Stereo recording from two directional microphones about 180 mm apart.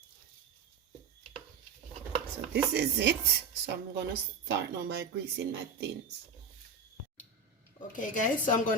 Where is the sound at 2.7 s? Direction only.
70° right (ahead or behind).